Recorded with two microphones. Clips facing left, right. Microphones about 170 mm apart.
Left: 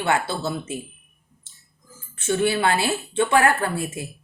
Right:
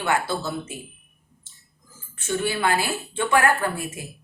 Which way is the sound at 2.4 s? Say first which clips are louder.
Left 2 dB; 25° left (ahead or behind).